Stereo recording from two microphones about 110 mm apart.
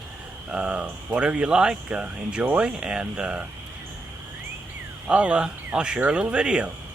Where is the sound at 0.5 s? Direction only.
10° right (ahead or behind).